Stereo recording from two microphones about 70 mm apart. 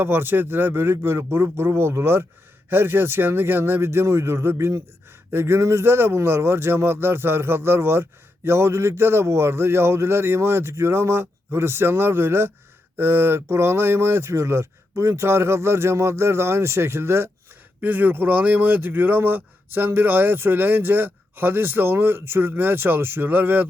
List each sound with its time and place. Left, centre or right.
0.0 s speech: right
17.7 s speech: right